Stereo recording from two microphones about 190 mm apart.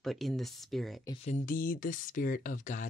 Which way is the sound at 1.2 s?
40° left (ahead or behind).